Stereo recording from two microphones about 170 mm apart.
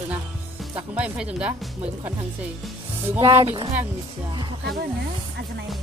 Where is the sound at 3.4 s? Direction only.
35° right (ahead or behind).